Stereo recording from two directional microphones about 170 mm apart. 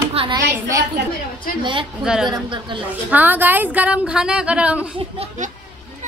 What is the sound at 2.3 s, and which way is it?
Speech, 30° right (ahead or behind).